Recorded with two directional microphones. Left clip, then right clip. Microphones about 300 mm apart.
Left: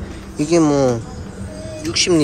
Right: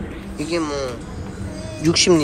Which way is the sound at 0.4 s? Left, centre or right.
Centre.